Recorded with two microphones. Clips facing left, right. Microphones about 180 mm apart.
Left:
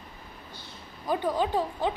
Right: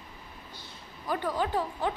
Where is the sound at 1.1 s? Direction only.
15° left (ahead or behind).